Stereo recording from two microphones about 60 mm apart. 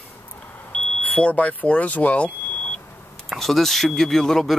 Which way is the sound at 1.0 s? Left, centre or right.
Left.